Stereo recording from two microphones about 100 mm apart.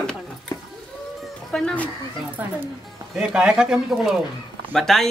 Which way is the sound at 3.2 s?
10° right (ahead or behind).